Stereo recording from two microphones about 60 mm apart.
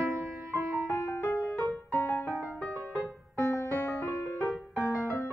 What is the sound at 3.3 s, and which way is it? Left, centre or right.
Music, left.